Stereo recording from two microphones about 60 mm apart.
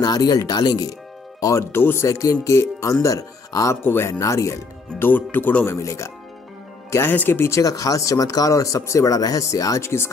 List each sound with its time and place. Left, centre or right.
0.0 s speech: left
1.6 s speech: left
2.0 s speech: left
3.8 s speech: left
4.9 s speech: left
5.8 s speech: left
6.9 s speech: left
7.6 s speech: left
9.8 s speech: left